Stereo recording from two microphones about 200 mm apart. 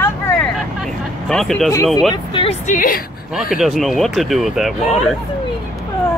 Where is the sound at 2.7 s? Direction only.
45° left (ahead or behind).